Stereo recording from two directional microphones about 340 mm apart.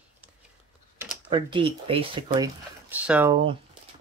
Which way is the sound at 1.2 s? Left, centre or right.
Centre.